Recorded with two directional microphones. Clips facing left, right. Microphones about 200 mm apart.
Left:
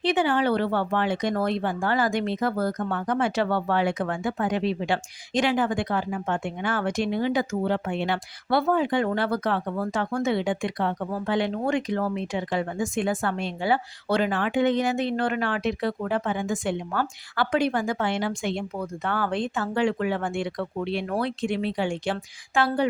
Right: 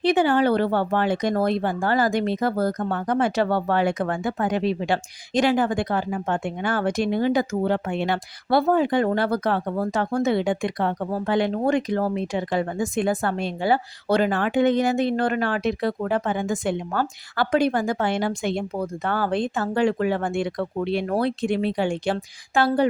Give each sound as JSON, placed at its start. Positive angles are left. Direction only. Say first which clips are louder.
{"t": 0.0, "sound": "speech", "louder": "right 4 dB", "side_deg": -40}